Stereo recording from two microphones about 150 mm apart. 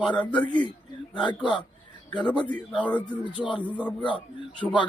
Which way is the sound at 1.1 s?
30° left (ahead or behind).